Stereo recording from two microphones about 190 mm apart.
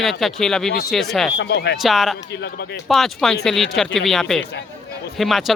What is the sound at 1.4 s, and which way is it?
Speech, 65° left (ahead or behind).